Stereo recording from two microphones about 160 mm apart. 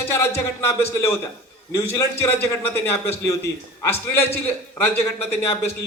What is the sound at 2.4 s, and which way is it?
A man's voice, 15° left (ahead or behind).